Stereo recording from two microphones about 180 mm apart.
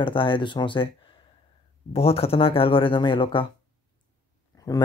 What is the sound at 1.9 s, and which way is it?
Speech, 35° left (ahead or behind).